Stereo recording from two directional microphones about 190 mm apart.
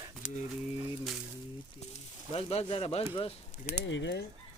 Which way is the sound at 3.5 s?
35° left (ahead or behind).